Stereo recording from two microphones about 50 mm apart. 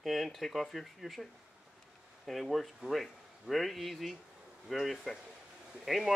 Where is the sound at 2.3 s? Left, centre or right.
Centre.